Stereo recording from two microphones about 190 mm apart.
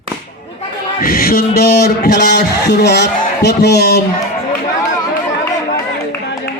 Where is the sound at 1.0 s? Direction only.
50° left (ahead or behind).